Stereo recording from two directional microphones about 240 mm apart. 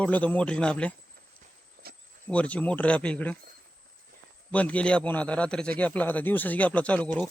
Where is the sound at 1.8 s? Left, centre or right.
Right.